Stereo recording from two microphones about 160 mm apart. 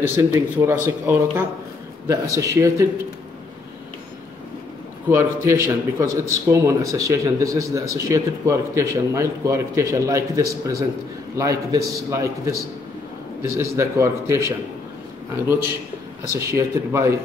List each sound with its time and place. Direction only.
0.0 s speech: 15° right (ahead or behind)
5.1 s speech: 15° right (ahead or behind)
13.4 s speech: 15° right (ahead or behind)
15.4 s speech: 15° right (ahead or behind)